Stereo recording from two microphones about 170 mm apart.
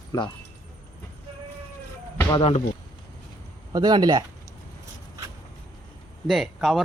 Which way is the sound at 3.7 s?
25° right (ahead or behind).